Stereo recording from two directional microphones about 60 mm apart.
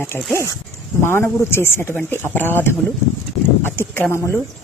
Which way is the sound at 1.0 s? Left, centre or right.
Left.